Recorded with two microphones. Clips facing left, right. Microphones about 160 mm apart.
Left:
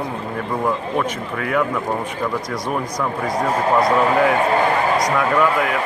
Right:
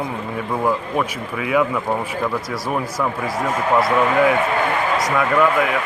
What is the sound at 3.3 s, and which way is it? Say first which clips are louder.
A man's voice: left 1 dB; 5° right (ahead or behind).